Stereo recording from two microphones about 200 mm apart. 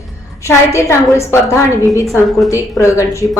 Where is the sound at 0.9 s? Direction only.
15° left (ahead or behind).